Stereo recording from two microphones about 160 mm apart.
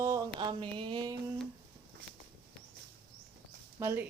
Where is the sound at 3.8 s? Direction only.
15° right (ahead or behind).